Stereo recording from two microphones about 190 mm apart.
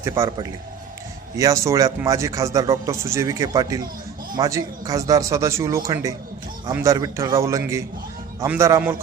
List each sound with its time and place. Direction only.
0.0 s a man's voice: 20° right (ahead or behind)